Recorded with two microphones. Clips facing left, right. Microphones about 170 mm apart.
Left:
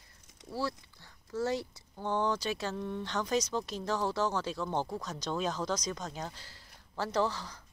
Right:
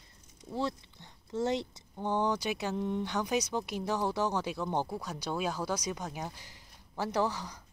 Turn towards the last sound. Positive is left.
turn(degrees=-15)  # may be behind; listen again after turning